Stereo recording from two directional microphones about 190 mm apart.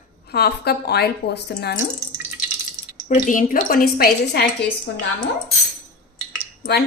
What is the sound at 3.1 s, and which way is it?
A woman's voice, 45° left (ahead or behind).